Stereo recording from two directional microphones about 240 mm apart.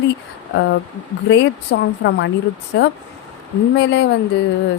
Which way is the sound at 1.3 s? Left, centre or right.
Left.